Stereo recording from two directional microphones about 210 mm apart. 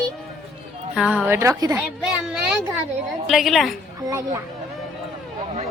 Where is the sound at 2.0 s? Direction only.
5° right (ahead or behind).